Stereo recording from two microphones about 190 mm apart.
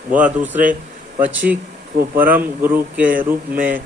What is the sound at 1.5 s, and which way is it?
Speech, 50° right (ahead or behind).